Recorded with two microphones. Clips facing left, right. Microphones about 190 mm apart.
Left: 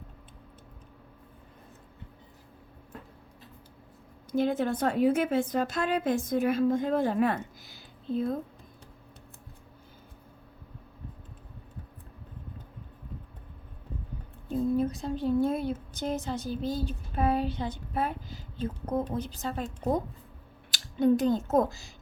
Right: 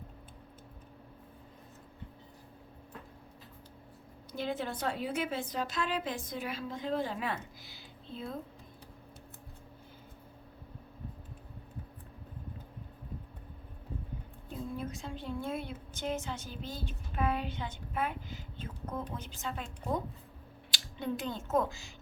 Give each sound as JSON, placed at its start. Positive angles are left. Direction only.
{"t": 4.3, "sound": "a woman's voice", "side_deg": 50}
{"t": 14.5, "sound": "a woman's voice", "side_deg": 40}